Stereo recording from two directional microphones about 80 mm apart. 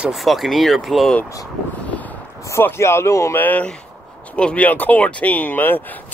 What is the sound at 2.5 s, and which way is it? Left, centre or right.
Speech, left.